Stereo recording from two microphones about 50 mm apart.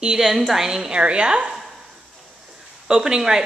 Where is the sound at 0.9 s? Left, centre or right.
Right.